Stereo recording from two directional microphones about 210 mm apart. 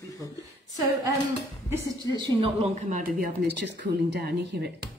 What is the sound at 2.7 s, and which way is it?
Speech, 35° right (ahead or behind).